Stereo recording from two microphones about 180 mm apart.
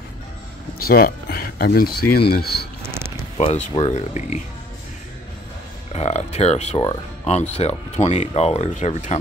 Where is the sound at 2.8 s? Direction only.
15° right (ahead or behind).